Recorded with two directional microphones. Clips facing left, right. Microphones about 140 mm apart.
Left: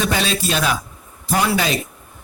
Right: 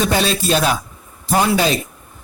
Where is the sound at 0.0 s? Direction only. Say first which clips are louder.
Right 3 dB; 40° right (ahead or behind).